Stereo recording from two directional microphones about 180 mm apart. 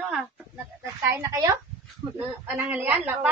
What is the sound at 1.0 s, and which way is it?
A man's voice, 15° right (ahead or behind).